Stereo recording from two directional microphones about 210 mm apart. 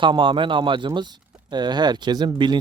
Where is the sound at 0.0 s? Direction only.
25° right (ahead or behind).